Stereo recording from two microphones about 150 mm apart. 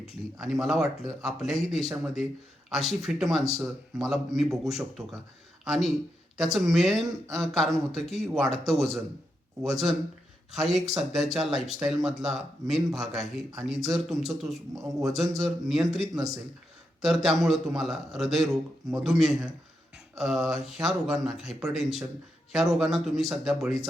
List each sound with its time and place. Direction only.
0.0 s speech: centre (ahead or behind)
16.1 s speech: 25° right (ahead or behind)
17.0 s speech: centre (ahead or behind)